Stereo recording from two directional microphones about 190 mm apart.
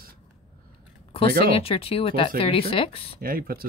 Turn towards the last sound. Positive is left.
turn(degrees=-50)  # may be behind; listen again after turning